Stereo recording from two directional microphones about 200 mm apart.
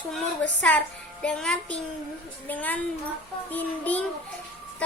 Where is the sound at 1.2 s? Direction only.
5° left (ahead or behind).